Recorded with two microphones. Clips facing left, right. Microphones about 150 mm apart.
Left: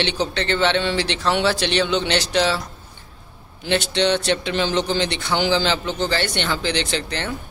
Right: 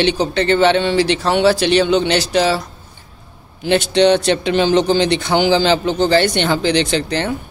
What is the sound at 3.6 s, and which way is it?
Speech, 15° right (ahead or behind).